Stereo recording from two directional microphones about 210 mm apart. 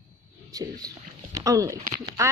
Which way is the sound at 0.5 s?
20° right (ahead or behind).